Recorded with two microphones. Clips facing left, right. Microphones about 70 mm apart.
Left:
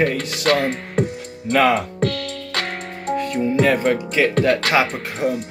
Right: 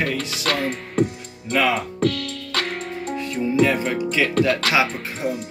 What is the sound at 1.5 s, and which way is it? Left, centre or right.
Speech, left.